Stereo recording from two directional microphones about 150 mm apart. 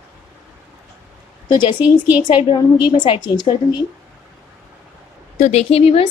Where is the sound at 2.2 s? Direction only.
35° left (ahead or behind).